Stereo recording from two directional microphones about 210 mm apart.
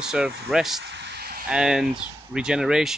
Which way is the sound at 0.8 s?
55° right (ahead or behind).